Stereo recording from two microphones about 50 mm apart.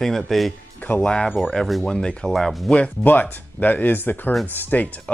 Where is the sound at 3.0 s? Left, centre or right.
Left.